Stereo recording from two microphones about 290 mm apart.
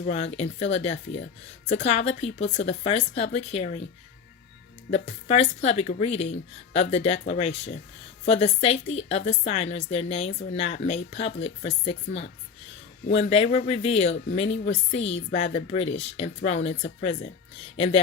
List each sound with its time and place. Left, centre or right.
0.0 s speech: left
5.0 s speech: left